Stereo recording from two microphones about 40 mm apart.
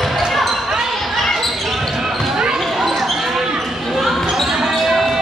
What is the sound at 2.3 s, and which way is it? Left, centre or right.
Basketball bounce, centre.